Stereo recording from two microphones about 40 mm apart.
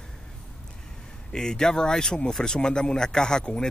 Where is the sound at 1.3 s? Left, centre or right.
Centre.